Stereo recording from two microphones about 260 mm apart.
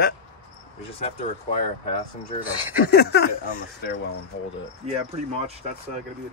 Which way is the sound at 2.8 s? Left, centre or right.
Left.